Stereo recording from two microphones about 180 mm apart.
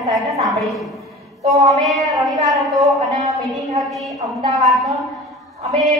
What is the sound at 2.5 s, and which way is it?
Speech, centre (ahead or behind).